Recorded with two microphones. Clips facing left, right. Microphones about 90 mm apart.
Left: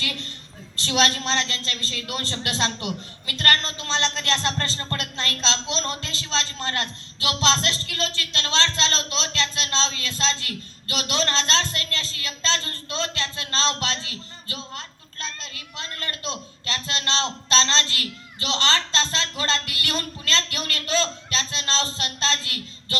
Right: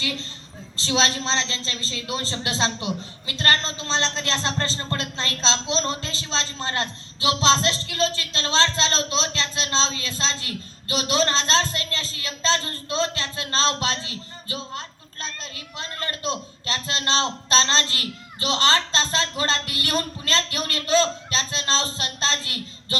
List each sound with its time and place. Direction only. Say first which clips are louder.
0.0 s a man's voice: right 2 dB; 20° right (ahead or behind)